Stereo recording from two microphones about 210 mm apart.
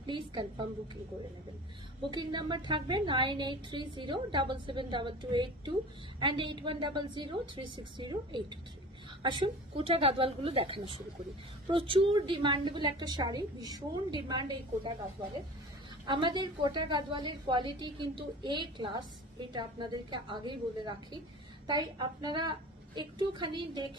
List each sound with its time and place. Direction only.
0.0 s a woman's voice: 20° right (ahead or behind)
2.0 s a woman's voice: 20° right (ahead or behind)
16.1 s a woman's voice: 20° right (ahead or behind)